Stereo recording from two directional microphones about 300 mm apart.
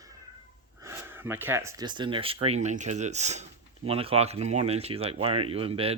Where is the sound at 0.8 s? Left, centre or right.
Centre.